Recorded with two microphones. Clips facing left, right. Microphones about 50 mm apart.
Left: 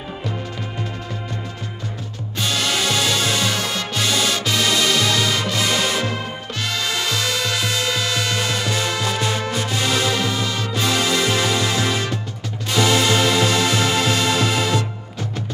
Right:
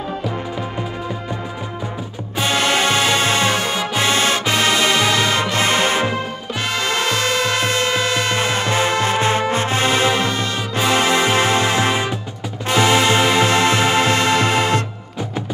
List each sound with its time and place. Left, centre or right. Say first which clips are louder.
2.3 s music: right 5 dB; right
6.7 s music: right 4 dB; right
8.4 s music: right 4 dB; right